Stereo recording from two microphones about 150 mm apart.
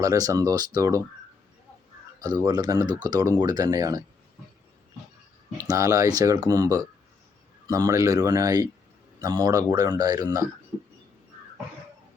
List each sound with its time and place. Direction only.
0.0 s speech: 25° right (ahead or behind)
2.2 s speech: 25° right (ahead or behind)
5.5 s speech: 20° right (ahead or behind)